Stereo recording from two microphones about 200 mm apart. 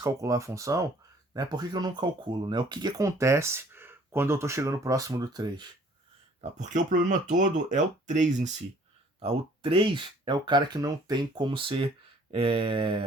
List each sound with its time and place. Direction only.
0.0 s speech: 15° right (ahead or behind)
6.4 s speech: 40° right (ahead or behind)